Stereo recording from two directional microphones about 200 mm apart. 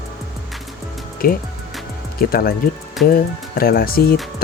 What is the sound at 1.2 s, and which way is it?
Speech, 45° left (ahead or behind).